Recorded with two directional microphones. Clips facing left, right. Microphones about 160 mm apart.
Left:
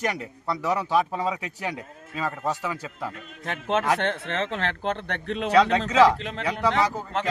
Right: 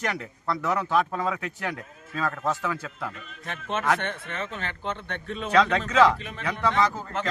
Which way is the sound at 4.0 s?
75° left (ahead or behind).